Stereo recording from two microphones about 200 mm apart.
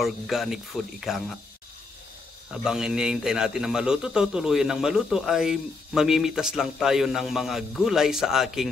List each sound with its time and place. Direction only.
0.0 s a man's voice: centre (ahead or behind)
2.6 s a man's voice: 5° right (ahead or behind)